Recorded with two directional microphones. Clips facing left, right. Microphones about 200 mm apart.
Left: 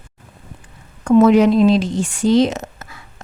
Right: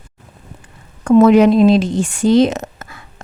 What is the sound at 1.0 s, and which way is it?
Speech, 60° right (ahead or behind).